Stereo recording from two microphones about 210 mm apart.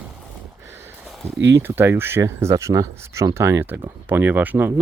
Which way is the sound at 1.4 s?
55° right (ahead or behind).